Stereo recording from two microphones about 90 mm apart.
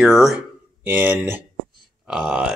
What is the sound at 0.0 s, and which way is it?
Speech, 5° right (ahead or behind).